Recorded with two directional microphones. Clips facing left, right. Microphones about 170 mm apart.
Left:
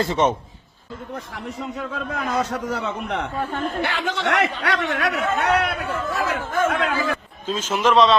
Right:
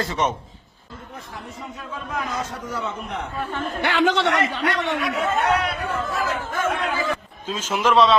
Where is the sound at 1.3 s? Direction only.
70° left (ahead or behind).